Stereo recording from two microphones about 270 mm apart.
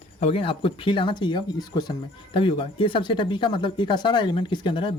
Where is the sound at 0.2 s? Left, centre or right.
Left.